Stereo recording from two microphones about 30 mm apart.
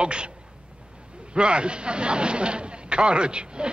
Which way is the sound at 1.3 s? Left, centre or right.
Right.